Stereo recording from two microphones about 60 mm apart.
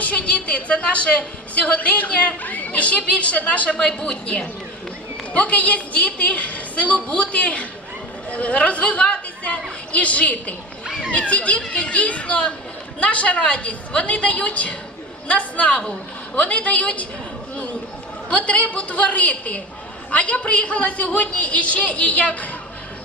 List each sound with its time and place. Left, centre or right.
0.0 s a woman's voice: left
3.8 s a woman's voice: centre
18.3 s a woman's voice: left